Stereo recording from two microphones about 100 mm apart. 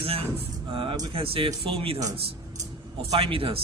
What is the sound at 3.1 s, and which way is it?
Speech, 65° right (ahead or behind).